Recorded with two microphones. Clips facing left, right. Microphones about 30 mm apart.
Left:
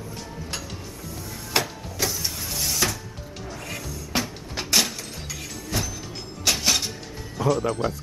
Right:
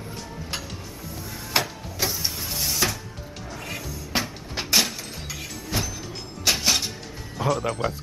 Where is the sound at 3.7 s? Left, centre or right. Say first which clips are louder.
Right 1 dB; centre.